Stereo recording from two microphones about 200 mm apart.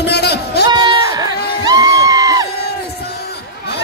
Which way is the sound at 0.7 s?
20° right (ahead or behind).